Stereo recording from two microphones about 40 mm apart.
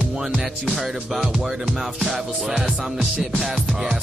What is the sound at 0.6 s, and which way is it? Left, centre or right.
Music, centre.